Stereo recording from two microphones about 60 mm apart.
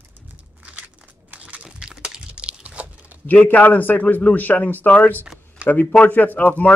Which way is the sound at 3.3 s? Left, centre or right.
Left.